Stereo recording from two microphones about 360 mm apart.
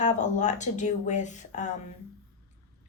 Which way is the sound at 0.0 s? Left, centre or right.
Centre.